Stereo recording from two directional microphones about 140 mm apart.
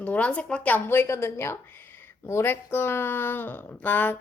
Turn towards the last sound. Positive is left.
turn(degrees=10)  # may be behind; listen again after turning